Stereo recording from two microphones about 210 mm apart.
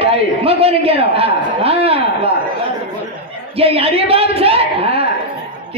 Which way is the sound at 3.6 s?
30° right (ahead or behind).